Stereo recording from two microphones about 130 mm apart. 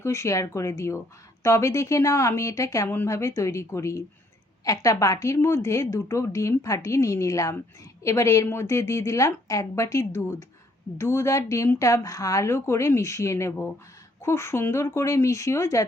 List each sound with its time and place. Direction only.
0.0 s speech: 20° left (ahead or behind)